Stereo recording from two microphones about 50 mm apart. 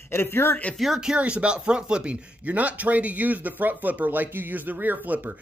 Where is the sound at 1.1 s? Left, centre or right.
Right.